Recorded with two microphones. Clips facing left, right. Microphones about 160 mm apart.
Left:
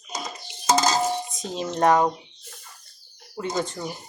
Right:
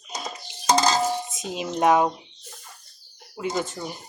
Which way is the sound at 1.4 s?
10° right (ahead or behind).